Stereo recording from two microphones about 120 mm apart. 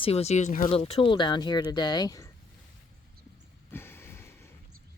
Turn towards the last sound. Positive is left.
turn(degrees=20)  # may be behind; listen again after turning